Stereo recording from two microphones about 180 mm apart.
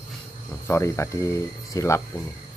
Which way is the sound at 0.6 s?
15° left (ahead or behind).